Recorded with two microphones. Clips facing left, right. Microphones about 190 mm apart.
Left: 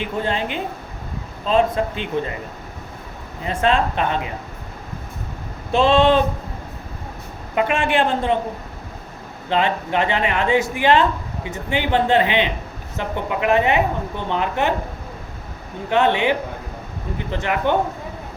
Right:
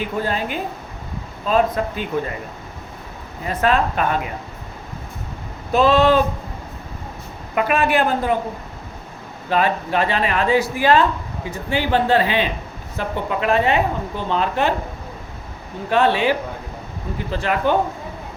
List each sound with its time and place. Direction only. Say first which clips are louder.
0.2 s a woman's voice: left 1 dB; 25° left (ahead or behind)
3.4 s a woman's voice: even; 25° left (ahead or behind)
5.7 s a woman's voice: even; 25° left (ahead or behind)
7.5 s a woman's voice: right 1 dB; 25° left (ahead or behind)
9.5 s a woman's voice: right 1 dB; 25° left (ahead or behind)
15.9 s a woman's voice: even; 20° left (ahead or behind)